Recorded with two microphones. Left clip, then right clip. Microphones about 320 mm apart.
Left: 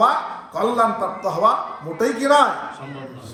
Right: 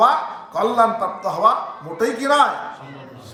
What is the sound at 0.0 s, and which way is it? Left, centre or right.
A man's voice, centre.